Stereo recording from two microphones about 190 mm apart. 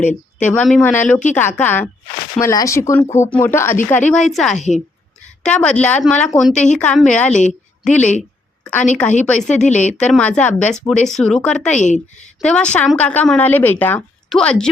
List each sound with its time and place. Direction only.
0.0 s a sound: 40° left (ahead or behind)
0.4 s a woman's voice: 5° left (ahead or behind)
4.5 s a woman's voice: 40° left (ahead or behind)
5.4 s a woman's voice: 5° left (ahead or behind)
9.5 s a woman's voice: 40° left (ahead or behind)
10.0 s a woman's voice: 5° left (ahead or behind)
11.8 s a woman's voice: 40° left (ahead or behind)
12.4 s speech: 5° left (ahead or behind)